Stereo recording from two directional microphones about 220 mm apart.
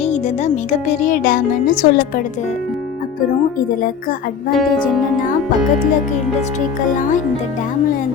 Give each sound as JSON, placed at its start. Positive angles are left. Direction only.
{"t": 0.0, "sound": "speech", "side_deg": 30}
{"t": 4.5, "sound": "speech", "side_deg": 0}